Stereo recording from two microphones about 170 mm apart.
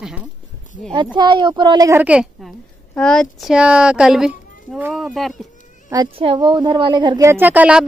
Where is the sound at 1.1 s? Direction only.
25° right (ahead or behind); by 5.5 s centre (ahead or behind).